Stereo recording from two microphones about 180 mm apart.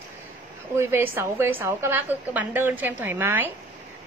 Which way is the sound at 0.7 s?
15° right (ahead or behind).